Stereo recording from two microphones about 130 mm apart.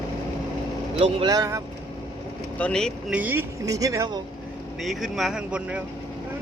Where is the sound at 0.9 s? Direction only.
50° right (ahead or behind).